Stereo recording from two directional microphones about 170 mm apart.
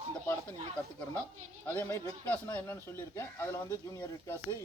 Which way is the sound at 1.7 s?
10° left (ahead or behind).